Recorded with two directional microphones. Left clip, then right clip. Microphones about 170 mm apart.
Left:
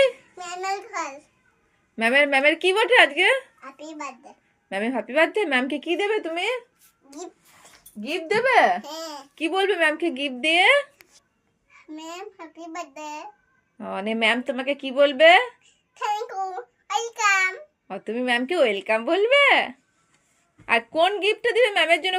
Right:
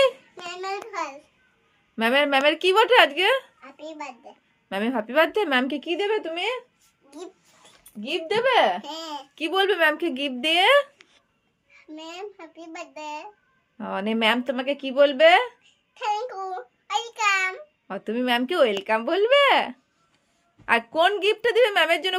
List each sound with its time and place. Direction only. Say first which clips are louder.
0.6 s a sound: left 2 dB; 5° right (ahead or behind)
2.0 s a woman's voice: left 1 dB; 10° right (ahead or behind)
3.6 s a child's voice: left 1 dB; centre (ahead or behind)
4.7 s a woman's voice: even; 15° right (ahead or behind)
8.0 s speech: left 1 dB; 10° left (ahead or behind)
9.0 s a woman's voice: left 1 dB; 15° right (ahead or behind)
11.7 s a child's voice: left 2 dB; 5° right (ahead or behind)
13.7 s a woman's voice: even; 15° right (ahead or behind)
16.0 s a child's voice: left 1 dB; centre (ahead or behind)
17.8 s a woman's voice: even; 15° right (ahead or behind)